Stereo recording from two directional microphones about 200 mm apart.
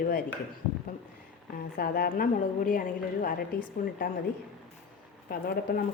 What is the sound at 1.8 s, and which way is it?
A woman's voice, 50° left (ahead or behind).